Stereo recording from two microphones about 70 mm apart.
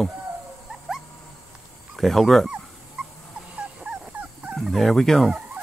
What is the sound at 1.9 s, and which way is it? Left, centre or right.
Speech, centre.